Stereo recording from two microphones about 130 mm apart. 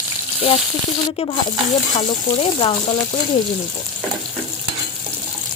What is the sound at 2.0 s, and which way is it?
Speech, 45° left (ahead or behind).